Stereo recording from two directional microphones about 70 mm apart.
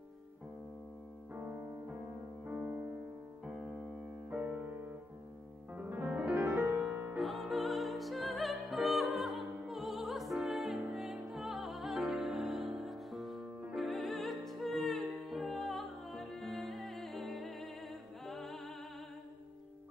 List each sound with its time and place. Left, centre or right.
3.4 s piano: centre
5.8 s music: right
7.2 s music: centre